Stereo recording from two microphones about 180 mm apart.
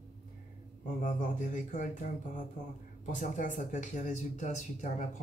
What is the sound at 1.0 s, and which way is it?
Speech, 45° left (ahead or behind).